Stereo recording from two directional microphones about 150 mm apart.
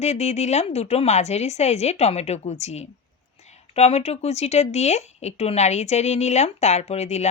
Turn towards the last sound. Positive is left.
turn(degrees=45)  # may be behind; listen again after turning